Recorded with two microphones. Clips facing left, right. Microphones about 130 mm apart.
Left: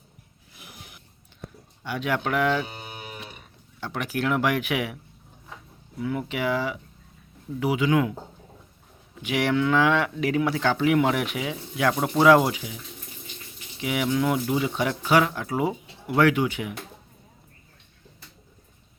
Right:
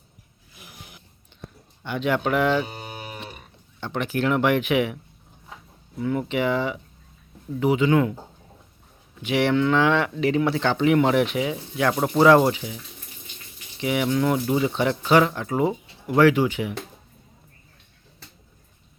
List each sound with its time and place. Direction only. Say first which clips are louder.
1.8 s speech: right 3 dB; 5° left (ahead or behind)
2.1 s moo: right 2 dB; centre (ahead or behind)
2.7 s a sound: right 3 dB; 40° right (ahead or behind)
3.8 s speech: right 3 dB; 10° left (ahead or behind)
6.0 s moo: right 4 dB; centre (ahead or behind)
7.6 s speech: right 3 dB; 10° left (ahead or behind)
9.2 s moo: right 3 dB; 10° left (ahead or behind)
15.2 s speech: right 3 dB; 5° left (ahead or behind)